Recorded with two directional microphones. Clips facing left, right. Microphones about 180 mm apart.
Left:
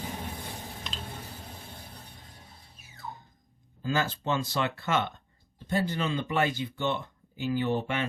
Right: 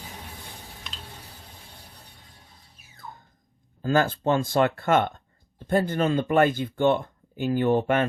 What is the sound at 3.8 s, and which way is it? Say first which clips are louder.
Speech: right 7 dB; 50° right (ahead or behind).